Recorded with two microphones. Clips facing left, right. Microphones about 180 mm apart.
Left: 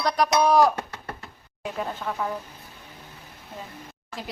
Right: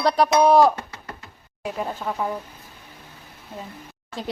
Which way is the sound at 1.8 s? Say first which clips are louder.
Right 2 dB; 20° right (ahead or behind).